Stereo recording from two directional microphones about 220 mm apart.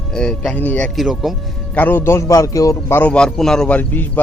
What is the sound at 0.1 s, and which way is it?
Speech, 5° left (ahead or behind).